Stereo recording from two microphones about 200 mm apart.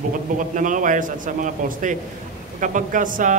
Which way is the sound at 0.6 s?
40° right (ahead or behind).